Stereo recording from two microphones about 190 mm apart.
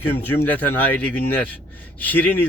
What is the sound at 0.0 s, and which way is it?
Speech, 10° left (ahead or behind).